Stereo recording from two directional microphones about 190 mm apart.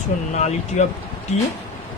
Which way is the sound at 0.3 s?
35° left (ahead or behind).